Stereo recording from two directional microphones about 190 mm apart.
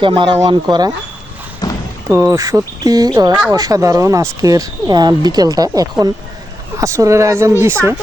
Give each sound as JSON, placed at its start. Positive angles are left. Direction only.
{"t": 0.0, "sound": "speech", "side_deg": -25}
{"t": 1.6, "sound": "a sound", "side_deg": 20}
{"t": 2.0, "sound": "speech", "side_deg": -15}